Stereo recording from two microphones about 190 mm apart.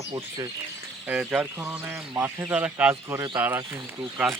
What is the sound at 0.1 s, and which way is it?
Speech, 25° right (ahead or behind).